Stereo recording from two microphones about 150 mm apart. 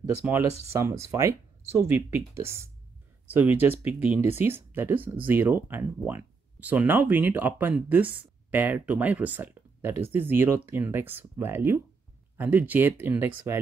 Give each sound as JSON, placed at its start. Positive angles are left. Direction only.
{"t": 0.3, "sound": "speech", "side_deg": -20}